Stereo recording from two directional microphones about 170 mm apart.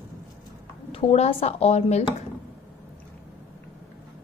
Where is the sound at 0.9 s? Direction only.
35° left (ahead or behind).